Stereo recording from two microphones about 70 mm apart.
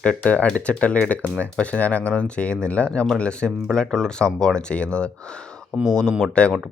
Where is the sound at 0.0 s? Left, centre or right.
Centre.